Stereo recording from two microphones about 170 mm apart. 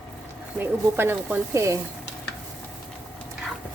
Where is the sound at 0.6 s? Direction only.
10° right (ahead or behind).